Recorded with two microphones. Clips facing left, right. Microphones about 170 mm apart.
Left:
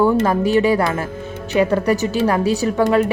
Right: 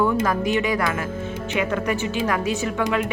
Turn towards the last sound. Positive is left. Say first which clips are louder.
# left 7 dB
turn(degrees=40)  # may be behind; listen again after turning